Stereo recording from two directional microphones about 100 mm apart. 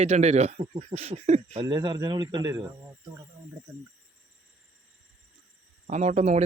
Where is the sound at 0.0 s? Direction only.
90° right.